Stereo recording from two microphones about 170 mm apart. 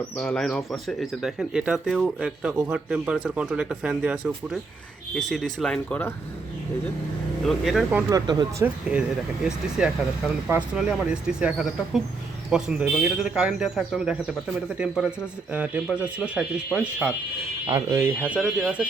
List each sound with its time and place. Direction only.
0.2 s speech: 5° left (ahead or behind)
7.4 s speech: centre (ahead or behind)
8.1 s speech: 25° right (ahead or behind)
8.6 s speech: 5° right (ahead or behind)
17.7 s speech: 20° right (ahead or behind)